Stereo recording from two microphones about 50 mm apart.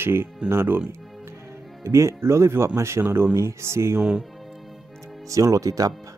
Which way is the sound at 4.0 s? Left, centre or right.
Centre.